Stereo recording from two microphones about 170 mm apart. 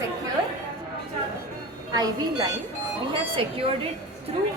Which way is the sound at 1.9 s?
25° right (ahead or behind).